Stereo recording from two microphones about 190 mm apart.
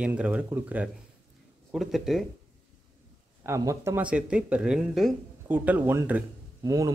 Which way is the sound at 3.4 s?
15° right (ahead or behind).